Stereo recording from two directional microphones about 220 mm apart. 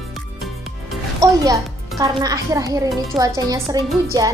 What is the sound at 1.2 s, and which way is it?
A woman's voice, 15° right (ahead or behind).